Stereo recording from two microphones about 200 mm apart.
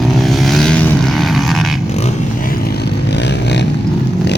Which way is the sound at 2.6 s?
55° left (ahead or behind).